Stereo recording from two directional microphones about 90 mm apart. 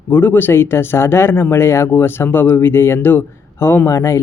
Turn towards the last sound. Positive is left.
turn(degrees=35)  # may be behind; listen again after turning